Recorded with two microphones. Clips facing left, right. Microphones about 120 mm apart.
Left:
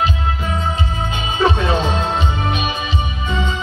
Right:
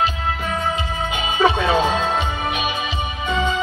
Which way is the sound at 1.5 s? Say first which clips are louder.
Right 1 dB; 25° left (ahead or behind).